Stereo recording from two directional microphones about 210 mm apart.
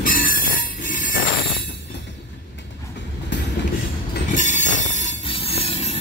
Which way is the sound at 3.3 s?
55° left (ahead or behind).